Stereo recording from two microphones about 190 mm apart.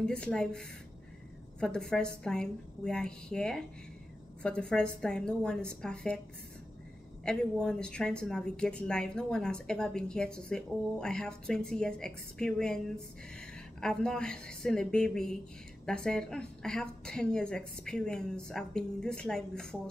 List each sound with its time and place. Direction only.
0.0 s a woman's voice: 5° left (ahead or behind)
7.2 s a woman's voice: 5° left (ahead or behind)